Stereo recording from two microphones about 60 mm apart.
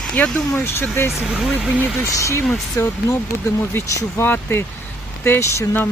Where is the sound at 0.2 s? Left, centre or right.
Left.